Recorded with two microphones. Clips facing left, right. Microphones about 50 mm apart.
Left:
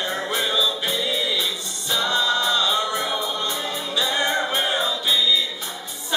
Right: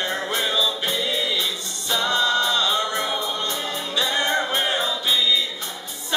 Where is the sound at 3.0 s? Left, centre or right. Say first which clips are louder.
Even; centre.